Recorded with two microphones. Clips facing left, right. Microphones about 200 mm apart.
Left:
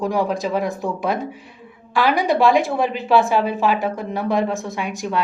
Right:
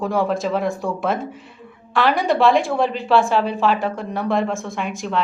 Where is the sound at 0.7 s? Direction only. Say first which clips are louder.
Right 1 dB; 20° left (ahead or behind).